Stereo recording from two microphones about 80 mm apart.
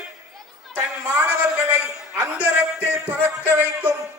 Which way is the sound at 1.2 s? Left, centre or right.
Right.